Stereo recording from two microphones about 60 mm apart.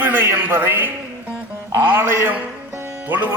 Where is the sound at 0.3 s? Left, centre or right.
Right.